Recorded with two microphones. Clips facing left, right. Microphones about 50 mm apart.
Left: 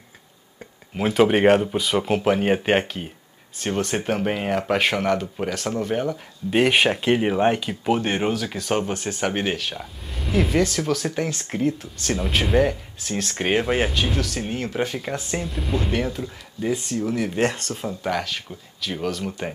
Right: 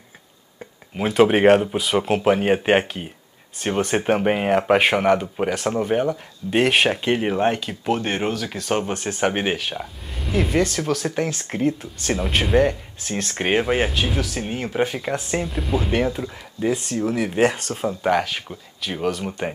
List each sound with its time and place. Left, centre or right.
0.9 s speech: centre
6.5 s speech: centre
10.0 s speech: centre
15.9 s speech: centre
16.7 s speech: right
17.3 s speech: centre
17.6 s speech: right; by 19.5 s centre